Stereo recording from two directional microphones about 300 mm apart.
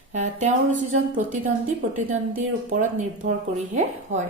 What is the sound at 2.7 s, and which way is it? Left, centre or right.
A woman's voice, right.